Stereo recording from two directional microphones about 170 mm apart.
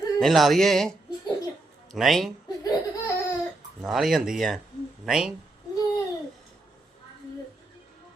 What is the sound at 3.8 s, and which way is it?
Speech, centre (ahead or behind).